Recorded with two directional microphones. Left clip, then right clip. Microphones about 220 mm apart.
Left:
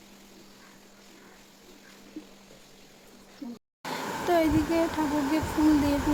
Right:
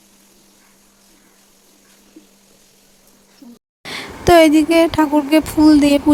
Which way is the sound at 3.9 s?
45° right (ahead or behind).